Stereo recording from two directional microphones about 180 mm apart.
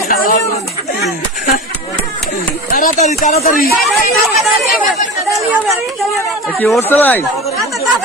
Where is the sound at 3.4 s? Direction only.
50° left (ahead or behind).